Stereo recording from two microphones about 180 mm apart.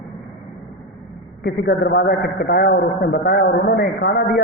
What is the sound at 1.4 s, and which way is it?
A man's voice, 65° left (ahead or behind).